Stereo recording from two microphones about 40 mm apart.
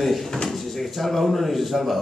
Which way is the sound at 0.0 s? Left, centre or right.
Centre.